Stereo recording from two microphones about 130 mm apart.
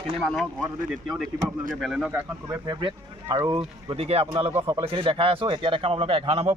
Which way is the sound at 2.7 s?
35° right (ahead or behind).